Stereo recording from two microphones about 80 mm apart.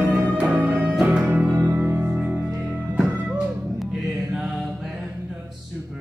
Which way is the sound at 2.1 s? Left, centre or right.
Centre.